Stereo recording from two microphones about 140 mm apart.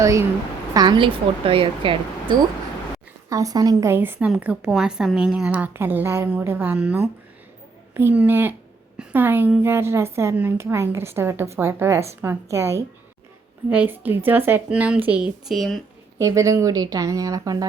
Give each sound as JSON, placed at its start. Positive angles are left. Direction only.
{"t": 0.0, "sound": "speech", "side_deg": -20}
{"t": 3.2, "sound": "a woman's voice", "side_deg": -25}
{"t": 16.1, "sound": "speech", "side_deg": -20}